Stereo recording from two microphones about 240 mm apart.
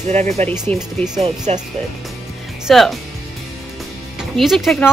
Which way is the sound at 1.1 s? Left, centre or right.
Right.